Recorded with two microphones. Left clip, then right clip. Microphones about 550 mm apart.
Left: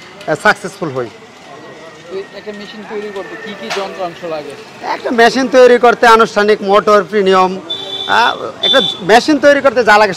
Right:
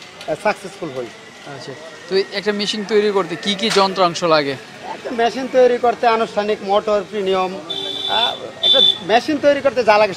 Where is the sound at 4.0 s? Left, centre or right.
Right.